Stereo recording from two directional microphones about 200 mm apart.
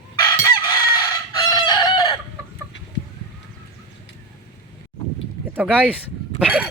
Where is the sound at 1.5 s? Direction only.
20° left (ahead or behind).